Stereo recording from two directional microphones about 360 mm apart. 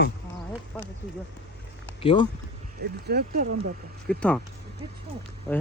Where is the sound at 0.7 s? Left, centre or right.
Centre.